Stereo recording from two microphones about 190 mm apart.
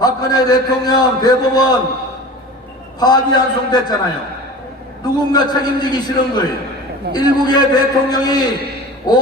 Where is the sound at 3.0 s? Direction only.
20° left (ahead or behind).